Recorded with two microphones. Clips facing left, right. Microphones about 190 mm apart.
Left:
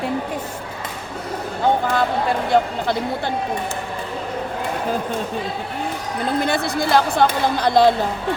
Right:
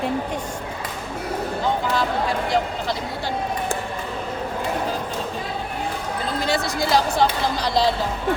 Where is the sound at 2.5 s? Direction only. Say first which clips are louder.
Left 4 dB; 55° left (ahead or behind).